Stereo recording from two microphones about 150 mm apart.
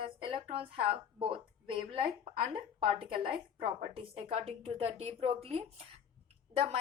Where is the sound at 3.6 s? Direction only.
35° right (ahead or behind).